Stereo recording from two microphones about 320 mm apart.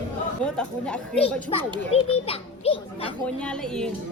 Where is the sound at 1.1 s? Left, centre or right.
Centre.